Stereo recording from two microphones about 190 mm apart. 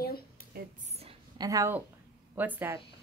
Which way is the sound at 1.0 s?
20° right (ahead or behind).